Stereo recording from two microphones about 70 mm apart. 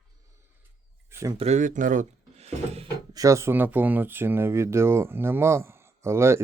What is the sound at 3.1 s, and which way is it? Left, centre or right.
Speech, right.